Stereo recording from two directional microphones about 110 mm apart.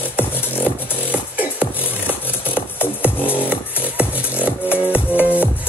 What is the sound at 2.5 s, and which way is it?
Music, 20° left (ahead or behind).